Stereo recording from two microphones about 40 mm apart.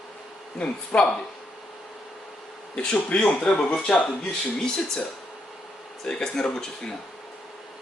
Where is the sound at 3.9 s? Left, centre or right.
Centre.